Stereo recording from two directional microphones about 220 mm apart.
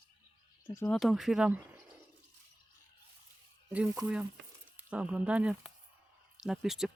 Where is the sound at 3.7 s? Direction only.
5° right (ahead or behind).